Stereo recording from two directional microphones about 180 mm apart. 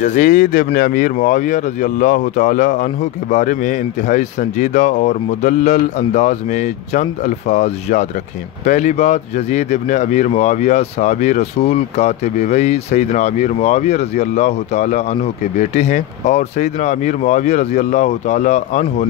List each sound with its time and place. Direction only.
0.0 s speech: 45° left (ahead or behind)